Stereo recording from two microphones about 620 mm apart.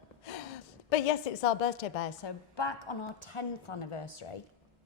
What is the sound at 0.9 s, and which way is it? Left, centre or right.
A woman's voice, left.